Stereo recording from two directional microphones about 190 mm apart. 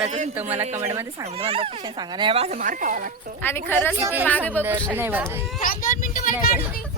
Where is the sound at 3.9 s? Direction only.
10° right (ahead or behind).